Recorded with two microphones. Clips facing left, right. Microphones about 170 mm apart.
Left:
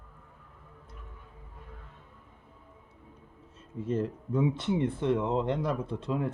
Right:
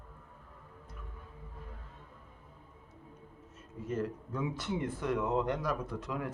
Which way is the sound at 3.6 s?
30° left (ahead or behind).